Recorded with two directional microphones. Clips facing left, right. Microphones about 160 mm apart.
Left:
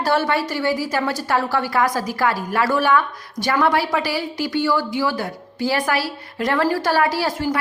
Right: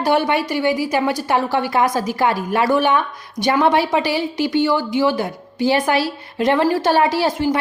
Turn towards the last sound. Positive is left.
turn(degrees=-20)  # may be behind; listen again after turning